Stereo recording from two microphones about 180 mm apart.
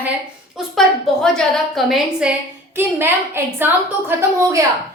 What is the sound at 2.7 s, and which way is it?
A woman's voice, 10° right (ahead or behind).